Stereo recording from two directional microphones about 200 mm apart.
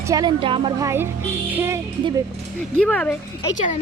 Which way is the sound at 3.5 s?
40° left (ahead or behind).